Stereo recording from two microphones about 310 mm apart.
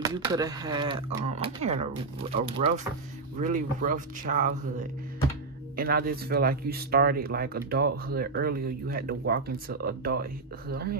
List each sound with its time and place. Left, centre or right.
0.0 s speech: centre
5.8 s speech: right